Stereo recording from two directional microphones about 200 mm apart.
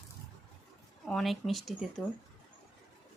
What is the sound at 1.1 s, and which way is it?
Speech, centre (ahead or behind).